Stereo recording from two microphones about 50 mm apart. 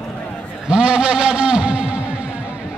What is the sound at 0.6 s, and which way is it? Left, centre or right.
A man's voice, centre.